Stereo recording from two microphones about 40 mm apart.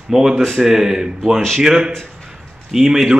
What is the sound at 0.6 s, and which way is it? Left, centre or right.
Speech, centre.